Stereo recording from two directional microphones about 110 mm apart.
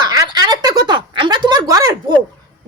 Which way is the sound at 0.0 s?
35° right (ahead or behind).